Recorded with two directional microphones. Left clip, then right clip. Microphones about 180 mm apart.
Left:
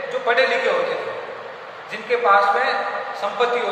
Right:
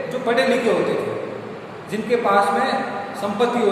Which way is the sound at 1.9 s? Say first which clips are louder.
Left 1 dB; 20° right (ahead or behind).